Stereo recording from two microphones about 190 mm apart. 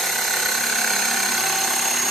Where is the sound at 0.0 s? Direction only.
Centre (ahead or behind).